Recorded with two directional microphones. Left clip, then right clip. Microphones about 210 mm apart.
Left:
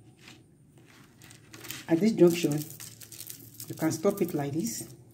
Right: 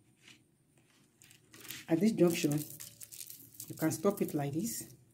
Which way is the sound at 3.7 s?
20° right (ahead or behind).